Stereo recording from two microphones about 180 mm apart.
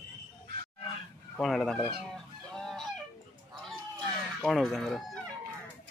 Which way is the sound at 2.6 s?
Centre (ahead or behind).